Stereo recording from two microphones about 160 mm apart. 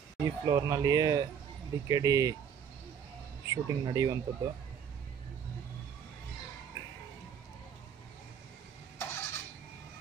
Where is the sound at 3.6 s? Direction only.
25° right (ahead or behind).